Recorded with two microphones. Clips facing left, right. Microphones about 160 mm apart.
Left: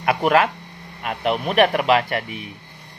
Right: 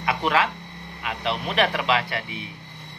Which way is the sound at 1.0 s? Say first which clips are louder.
Left 5 dB; 50° left (ahead or behind).